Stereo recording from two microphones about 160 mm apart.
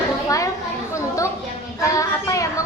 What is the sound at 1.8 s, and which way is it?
Speech, 20° left (ahead or behind).